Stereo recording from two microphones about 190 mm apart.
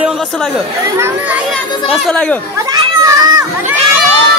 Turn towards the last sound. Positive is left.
turn(degrees=-20)  # may be behind; listen again after turning